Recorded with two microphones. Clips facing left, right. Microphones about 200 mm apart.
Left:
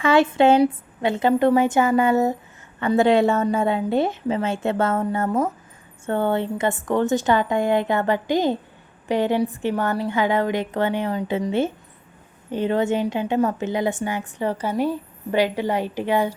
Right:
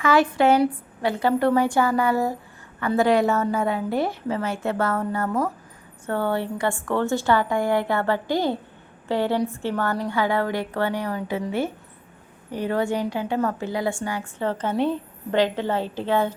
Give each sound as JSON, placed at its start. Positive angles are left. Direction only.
{"t": 0.0, "sound": "a woman's voice", "side_deg": 25}
{"t": 12.5, "sound": "a woman's voice", "side_deg": 20}